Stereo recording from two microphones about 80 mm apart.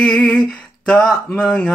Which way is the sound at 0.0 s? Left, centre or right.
Centre.